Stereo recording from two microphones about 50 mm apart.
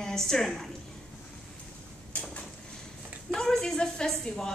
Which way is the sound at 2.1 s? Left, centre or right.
Left.